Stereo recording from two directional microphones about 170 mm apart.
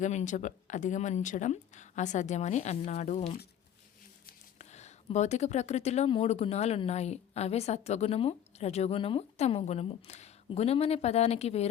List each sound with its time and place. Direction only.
0.0 s speech: 45° left (ahead or behind)
4.5 s speech: 40° left (ahead or behind)